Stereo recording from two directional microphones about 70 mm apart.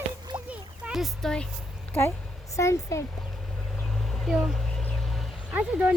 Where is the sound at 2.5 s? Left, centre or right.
Left.